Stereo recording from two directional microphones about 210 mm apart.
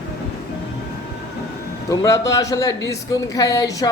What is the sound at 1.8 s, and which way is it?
A woman's voice, 15° left (ahead or behind).